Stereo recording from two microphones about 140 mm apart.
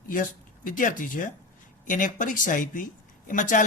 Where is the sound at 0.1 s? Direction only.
70° left (ahead or behind).